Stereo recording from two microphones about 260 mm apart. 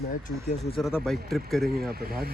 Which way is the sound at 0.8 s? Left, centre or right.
Centre.